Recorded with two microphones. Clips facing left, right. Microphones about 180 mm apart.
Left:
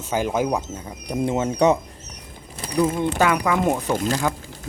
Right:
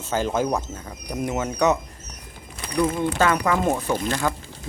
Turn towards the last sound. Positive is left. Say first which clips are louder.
# left 2 dB
turn(degrees=10)  # may be behind; listen again after turning